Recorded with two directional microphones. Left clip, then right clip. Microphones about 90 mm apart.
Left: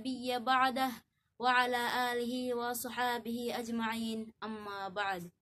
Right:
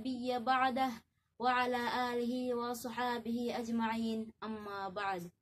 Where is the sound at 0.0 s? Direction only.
20° left (ahead or behind).